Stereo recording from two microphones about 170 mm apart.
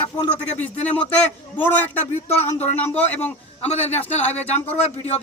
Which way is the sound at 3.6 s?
40° left (ahead or behind).